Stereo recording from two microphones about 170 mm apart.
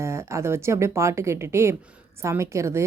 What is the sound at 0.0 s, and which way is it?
A woman's voice, 15° right (ahead or behind).